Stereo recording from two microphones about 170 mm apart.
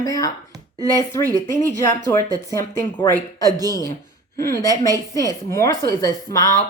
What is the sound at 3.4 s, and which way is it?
Speech, 20° right (ahead or behind).